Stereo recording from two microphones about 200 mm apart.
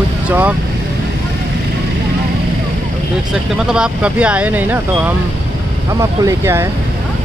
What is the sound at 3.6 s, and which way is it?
Speech, 5° right (ahead or behind).